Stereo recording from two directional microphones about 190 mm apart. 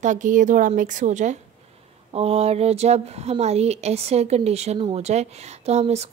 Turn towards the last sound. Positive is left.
turn(degrees=-35)  # may be behind; listen again after turning